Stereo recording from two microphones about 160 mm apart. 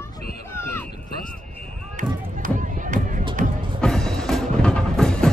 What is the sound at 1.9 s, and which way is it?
Run, 55° right (ahead or behind).